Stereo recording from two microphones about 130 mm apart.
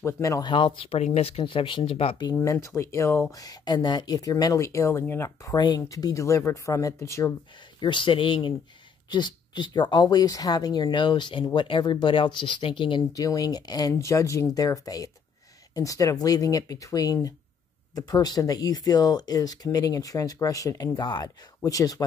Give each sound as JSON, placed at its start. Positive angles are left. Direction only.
{"t": 0.0, "sound": "speech", "side_deg": 25}
{"t": 0.5, "sound": "speech", "side_deg": 40}
{"t": 1.4, "sound": "speech", "side_deg": 40}
{"t": 2.3, "sound": "speech", "side_deg": 25}
{"t": 7.8, "sound": "speech", "side_deg": 40}
{"t": 13.1, "sound": "speech", "side_deg": 30}